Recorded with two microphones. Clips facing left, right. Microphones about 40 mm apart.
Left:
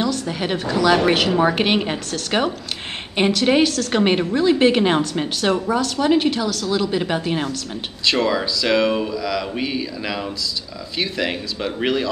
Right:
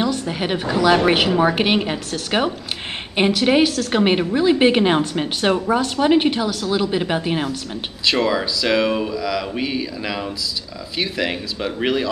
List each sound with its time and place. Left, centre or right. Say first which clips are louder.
0.0 s a woman's voice: right 1 dB; centre
5.4 s a woman's voice: right 2 dB; right; by 12.1 s centre